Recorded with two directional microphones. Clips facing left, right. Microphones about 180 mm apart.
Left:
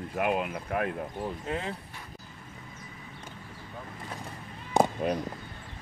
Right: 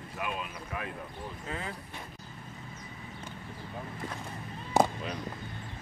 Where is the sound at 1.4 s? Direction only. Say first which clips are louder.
Left 3 dB; 25° left (ahead or behind).